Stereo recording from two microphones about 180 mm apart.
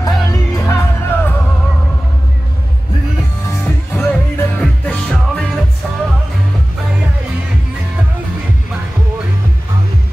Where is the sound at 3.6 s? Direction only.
10° left (ahead or behind).